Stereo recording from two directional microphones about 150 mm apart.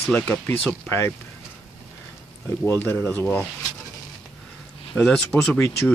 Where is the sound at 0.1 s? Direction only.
10° left (ahead or behind).